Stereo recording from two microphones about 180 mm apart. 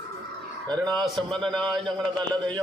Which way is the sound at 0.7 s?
25° right (ahead or behind).